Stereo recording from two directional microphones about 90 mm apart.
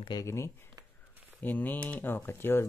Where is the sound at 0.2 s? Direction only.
30° left (ahead or behind).